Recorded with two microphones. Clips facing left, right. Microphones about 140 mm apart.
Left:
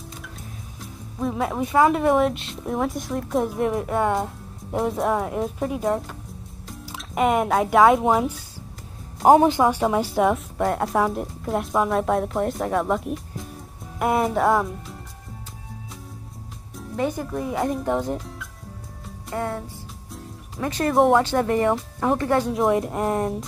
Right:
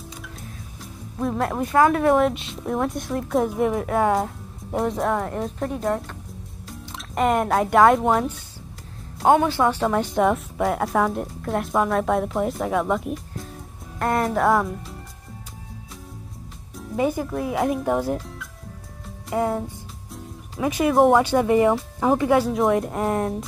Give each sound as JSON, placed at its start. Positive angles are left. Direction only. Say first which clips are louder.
{"t": 1.2, "sound": "speech", "louder": "right 1 dB", "side_deg": 0}
{"t": 9.2, "sound": "speech", "louder": "left 3 dB", "side_deg": 35}
{"t": 9.5, "sound": "speech", "louder": "left 1 dB", "side_deg": 10}
{"t": 16.7, "sound": "speech", "louder": "right 3 dB", "side_deg": -5}
{"t": 19.3, "sound": "speech", "louder": "right 5 dB", "side_deg": -15}
{"t": 20.6, "sound": "speech", "louder": "right 3 dB", "side_deg": -10}
{"t": 20.9, "sound": "speech", "louder": "right 1 dB", "side_deg": 0}
{"t": 21.2, "sound": "speech", "louder": "right 3 dB", "side_deg": -10}